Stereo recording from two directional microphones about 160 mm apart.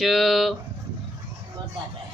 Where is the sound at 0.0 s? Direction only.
Centre (ahead or behind).